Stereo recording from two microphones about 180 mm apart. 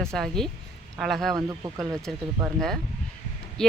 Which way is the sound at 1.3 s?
20° right (ahead or behind).